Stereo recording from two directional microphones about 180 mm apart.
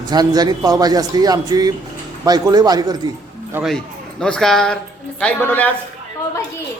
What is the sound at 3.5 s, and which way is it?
A man's voice, centre (ahead or behind).